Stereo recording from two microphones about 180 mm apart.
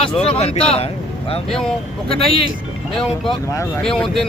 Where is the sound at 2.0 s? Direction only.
30° left (ahead or behind).